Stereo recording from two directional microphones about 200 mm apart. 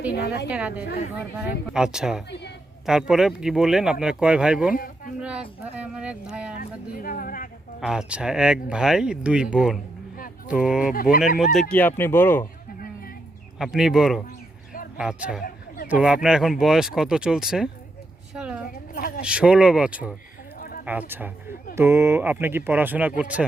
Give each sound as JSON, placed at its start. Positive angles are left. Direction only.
{"t": 0.1, "sound": "speech", "side_deg": 55}
{"t": 0.4, "sound": "speech", "side_deg": -5}
{"t": 4.7, "sound": "speech", "side_deg": 45}
{"t": 5.2, "sound": "speech", "side_deg": -5}
{"t": 6.6, "sound": "speech", "side_deg": 40}
{"t": 7.8, "sound": "speech", "side_deg": -5}
{"t": 10.9, "sound": "speech", "side_deg": 45}
{"t": 11.7, "sound": "speech", "side_deg": 10}
{"t": 12.8, "sound": "a sound", "side_deg": 45}
{"t": 13.6, "sound": "speech", "side_deg": 0}
{"t": 18.3, "sound": "a sound", "side_deg": -5}
{"t": 18.7, "sound": "a sound", "side_deg": 45}
{"t": 19.2, "sound": "speech", "side_deg": -5}